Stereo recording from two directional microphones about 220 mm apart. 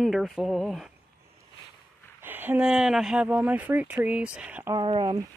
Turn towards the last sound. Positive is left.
turn(degrees=-20)  # may be behind; listen again after turning